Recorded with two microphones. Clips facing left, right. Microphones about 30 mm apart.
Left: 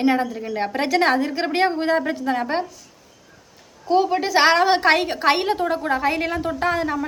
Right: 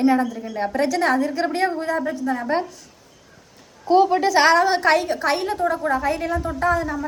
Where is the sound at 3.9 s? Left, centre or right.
Centre.